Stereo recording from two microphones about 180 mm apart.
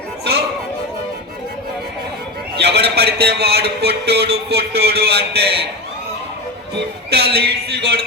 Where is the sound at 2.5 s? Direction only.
70° right (ahead or behind).